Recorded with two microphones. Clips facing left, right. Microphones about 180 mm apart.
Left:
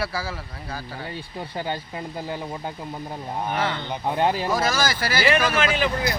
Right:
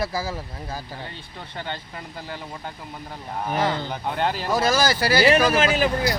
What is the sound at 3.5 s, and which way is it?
Speech, 35° right (ahead or behind).